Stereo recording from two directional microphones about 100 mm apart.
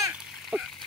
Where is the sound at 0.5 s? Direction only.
15° right (ahead or behind).